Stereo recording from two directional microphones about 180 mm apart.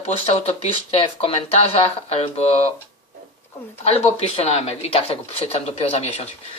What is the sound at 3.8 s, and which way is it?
Speech, 35° left (ahead or behind).